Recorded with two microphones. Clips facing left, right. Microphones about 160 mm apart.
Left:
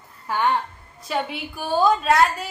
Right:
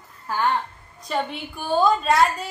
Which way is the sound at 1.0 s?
5° left (ahead or behind).